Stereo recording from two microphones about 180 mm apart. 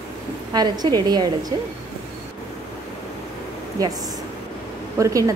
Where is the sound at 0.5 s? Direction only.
20° right (ahead or behind).